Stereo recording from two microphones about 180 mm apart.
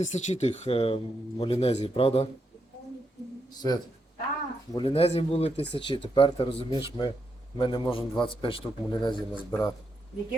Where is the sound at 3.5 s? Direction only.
20° left (ahead or behind).